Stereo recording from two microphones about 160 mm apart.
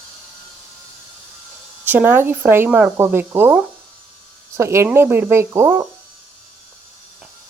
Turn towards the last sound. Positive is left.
turn(degrees=-15)  # may be behind; listen again after turning